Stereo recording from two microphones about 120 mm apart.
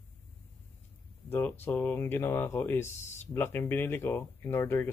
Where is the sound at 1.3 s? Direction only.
15° left (ahead or behind).